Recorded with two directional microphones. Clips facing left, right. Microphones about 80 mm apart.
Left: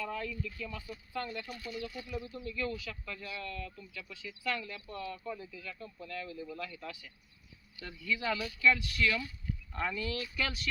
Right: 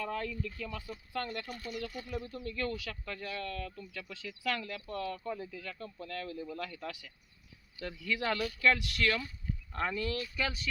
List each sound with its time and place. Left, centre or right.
0.0 s speech: right
9.7 s speech: right